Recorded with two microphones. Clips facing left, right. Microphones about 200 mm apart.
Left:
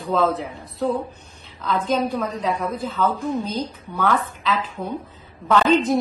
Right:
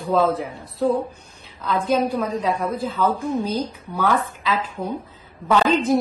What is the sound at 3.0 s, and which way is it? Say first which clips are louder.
A woman's voice: even; 15° right (ahead or behind).